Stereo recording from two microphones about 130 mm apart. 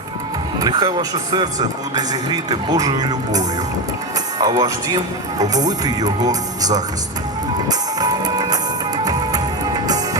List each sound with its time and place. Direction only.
0.6 s a man's voice: 35° right (ahead or behind)
7.7 s music: 30° right (ahead or behind)